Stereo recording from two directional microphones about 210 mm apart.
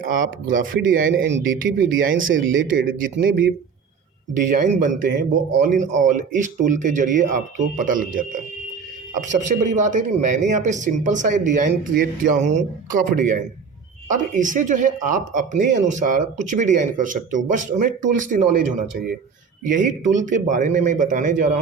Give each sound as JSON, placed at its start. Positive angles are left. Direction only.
{"t": 0.0, "sound": "speech", "side_deg": -40}
{"t": 1.2, "sound": "speech", "side_deg": -65}
{"t": 2.7, "sound": "speech", "side_deg": -40}